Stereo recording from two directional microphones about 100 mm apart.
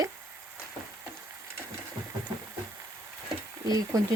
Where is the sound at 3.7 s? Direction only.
40° right (ahead or behind).